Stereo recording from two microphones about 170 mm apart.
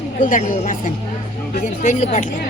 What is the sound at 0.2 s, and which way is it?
Speech, 50° left (ahead or behind).